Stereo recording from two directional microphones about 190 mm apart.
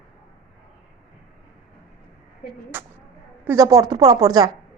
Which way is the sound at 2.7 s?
10° right (ahead or behind).